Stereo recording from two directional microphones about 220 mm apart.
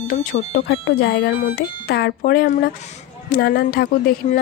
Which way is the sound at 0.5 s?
60° left (ahead or behind).